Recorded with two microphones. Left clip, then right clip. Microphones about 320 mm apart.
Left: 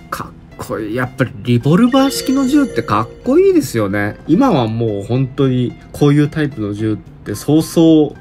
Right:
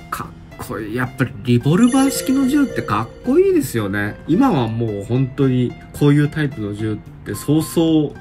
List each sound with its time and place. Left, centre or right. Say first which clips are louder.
0.1 s speech: left 2 dB; centre